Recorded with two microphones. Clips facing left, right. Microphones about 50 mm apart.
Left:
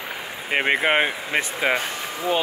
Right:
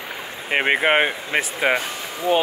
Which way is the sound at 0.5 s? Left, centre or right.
Centre.